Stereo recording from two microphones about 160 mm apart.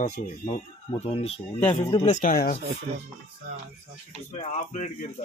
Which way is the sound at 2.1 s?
55° left (ahead or behind).